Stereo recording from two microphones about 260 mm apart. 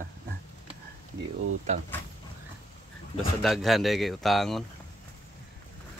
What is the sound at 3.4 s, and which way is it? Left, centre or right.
Speech, centre.